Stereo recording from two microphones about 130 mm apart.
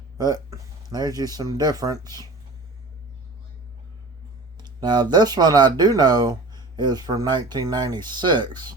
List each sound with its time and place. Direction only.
0.2 s speech: 30° right (ahead or behind)
4.5 s speech: 35° right (ahead or behind)